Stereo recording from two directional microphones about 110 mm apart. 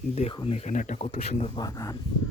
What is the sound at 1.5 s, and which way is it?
Speech, 35° left (ahead or behind).